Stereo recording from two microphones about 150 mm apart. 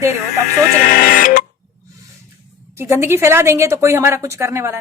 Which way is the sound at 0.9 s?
75° left (ahead or behind).